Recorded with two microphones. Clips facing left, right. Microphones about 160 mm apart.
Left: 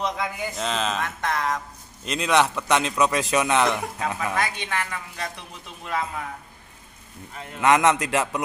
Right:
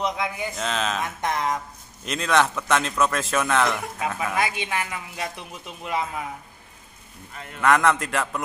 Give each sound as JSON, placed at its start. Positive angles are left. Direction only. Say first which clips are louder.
{"t": 0.0, "sound": "speech", "louder": "right 1 dB", "side_deg": 0}
{"t": 1.0, "sound": "a woman's voice", "louder": "right 1 dB", "side_deg": -20}
{"t": 2.0, "sound": "speech", "louder": "left 1 dB", "side_deg": 0}
{"t": 3.1, "sound": "speech", "louder": "left 3 dB", "side_deg": 15}
{"t": 3.3, "sound": "speech", "louder": "left 1 dB", "side_deg": 0}
{"t": 4.4, "sound": "a woman's voice", "louder": "right 1 dB", "side_deg": -15}
{"t": 7.5, "sound": "a man's voice", "louder": "left 1 dB", "side_deg": 20}